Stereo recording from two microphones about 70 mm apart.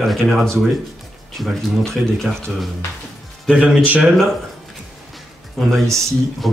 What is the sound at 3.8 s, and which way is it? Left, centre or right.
Speech, right.